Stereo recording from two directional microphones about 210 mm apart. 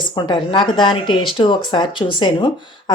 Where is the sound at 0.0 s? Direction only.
20° left (ahead or behind).